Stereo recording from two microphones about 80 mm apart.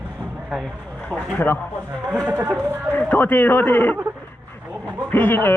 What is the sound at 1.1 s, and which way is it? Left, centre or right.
Speech, right.